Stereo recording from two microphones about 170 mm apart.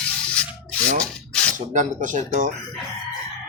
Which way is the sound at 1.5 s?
50° right (ahead or behind).